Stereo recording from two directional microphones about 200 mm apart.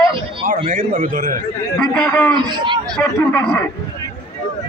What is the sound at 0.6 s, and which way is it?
Speech, 45° right (ahead or behind).